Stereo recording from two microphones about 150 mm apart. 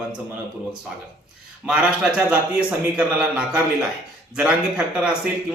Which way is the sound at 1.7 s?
5° right (ahead or behind).